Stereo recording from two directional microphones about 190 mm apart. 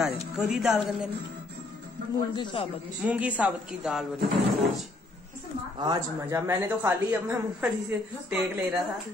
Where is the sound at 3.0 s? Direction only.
5° right (ahead or behind).